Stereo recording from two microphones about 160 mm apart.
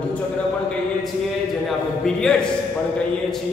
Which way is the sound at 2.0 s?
5° left (ahead or behind).